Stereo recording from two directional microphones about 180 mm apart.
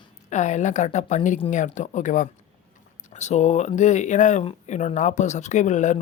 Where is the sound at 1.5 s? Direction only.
45° left (ahead or behind).